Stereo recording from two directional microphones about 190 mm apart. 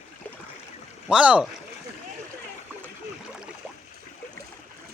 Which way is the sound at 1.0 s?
5° right (ahead or behind).